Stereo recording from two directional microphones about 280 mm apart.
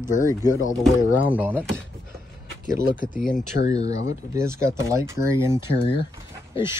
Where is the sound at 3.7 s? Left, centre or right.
Centre.